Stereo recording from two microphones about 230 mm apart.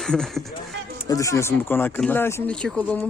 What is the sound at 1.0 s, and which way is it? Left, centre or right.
Speech, centre.